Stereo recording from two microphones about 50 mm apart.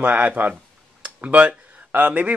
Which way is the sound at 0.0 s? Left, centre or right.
Right.